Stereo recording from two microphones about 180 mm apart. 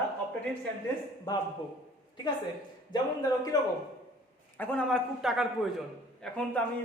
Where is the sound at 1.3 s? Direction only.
25° left (ahead or behind).